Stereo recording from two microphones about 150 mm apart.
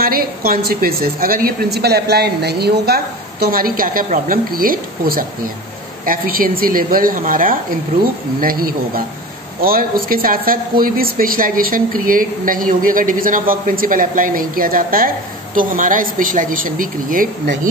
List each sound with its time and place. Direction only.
0.0 s a woman's voice: 75° right (ahead or behind)
8.4 s a woman's voice: 75° right (ahead or behind)